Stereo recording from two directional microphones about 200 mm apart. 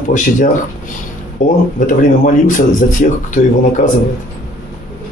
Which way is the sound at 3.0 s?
40° left (ahead or behind).